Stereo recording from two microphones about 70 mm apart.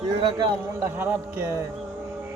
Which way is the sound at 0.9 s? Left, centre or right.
Right.